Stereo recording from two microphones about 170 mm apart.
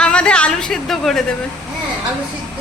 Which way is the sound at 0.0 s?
5° left (ahead or behind).